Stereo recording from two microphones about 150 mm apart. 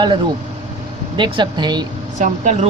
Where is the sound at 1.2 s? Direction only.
30° right (ahead or behind).